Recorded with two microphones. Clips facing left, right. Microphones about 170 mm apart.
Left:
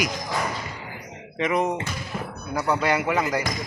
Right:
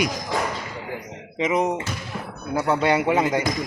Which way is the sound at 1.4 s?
20° right (ahead or behind).